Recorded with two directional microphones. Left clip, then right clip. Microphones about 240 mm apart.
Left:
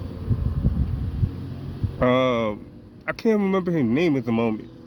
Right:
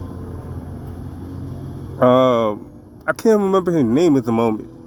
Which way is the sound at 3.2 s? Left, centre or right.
Left.